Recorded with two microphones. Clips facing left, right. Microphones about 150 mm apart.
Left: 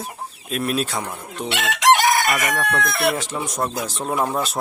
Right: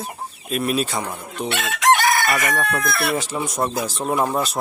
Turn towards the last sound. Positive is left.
turn(degrees=0)  # may be behind; listen again after turning